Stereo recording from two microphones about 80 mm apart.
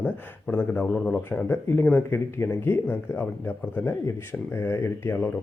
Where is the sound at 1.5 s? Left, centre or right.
Left.